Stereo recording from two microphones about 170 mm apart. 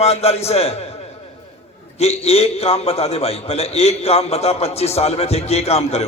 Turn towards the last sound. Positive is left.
turn(degrees=40)  # may be behind; listen again after turning